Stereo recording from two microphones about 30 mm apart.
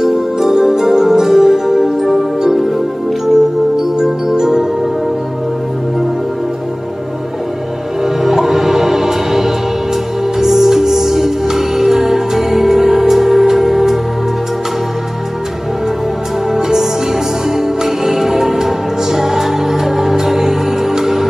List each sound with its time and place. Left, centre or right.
0.0 s music: centre
4.0 s music: centre
8.0 s music: centre
16.5 s music: centre